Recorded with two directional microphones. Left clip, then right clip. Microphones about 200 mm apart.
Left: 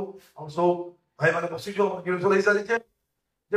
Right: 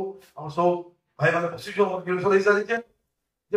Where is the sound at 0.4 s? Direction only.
25° left (ahead or behind).